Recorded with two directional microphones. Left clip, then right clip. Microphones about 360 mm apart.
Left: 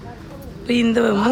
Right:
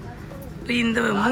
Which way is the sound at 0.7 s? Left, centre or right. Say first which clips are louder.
Left 5 dB; centre.